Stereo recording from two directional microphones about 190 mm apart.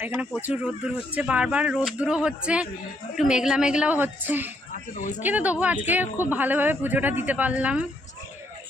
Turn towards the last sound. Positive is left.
turn(degrees=-5)  # may be behind; listen again after turning